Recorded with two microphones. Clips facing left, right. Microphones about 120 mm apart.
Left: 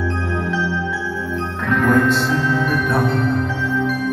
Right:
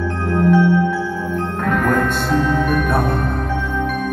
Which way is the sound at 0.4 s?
50° right (ahead or behind).